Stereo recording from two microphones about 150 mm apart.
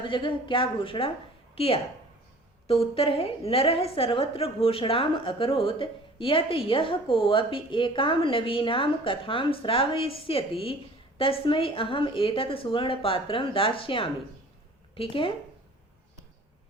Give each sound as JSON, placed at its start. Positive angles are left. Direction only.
{"t": 0.0, "sound": "a woman's voice", "side_deg": 35}